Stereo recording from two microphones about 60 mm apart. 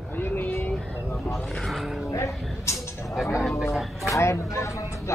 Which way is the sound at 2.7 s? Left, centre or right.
Left.